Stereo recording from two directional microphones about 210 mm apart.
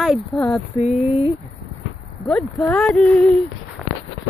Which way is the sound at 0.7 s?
30° left (ahead or behind).